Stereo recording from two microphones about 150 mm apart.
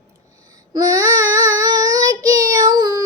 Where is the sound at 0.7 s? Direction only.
25° right (ahead or behind).